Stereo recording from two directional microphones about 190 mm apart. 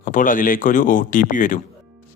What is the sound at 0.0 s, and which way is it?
Speech, 45° left (ahead or behind).